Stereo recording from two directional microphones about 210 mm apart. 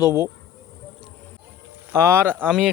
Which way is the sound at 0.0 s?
15° left (ahead or behind).